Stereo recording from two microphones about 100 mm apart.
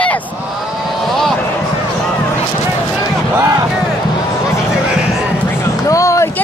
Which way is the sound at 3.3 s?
35° right (ahead or behind).